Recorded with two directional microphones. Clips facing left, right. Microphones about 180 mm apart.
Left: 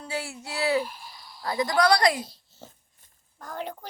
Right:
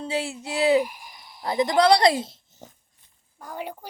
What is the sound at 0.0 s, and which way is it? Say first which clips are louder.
A woman's voice: right 5 dB; 20° right (ahead or behind).